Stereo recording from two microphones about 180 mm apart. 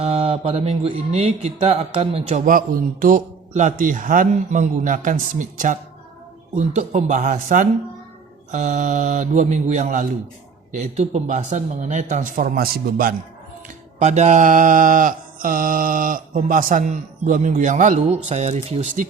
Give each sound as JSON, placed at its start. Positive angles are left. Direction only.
{"t": 0.0, "sound": "speech", "side_deg": -35}
{"t": 14.0, "sound": "speech", "side_deg": -40}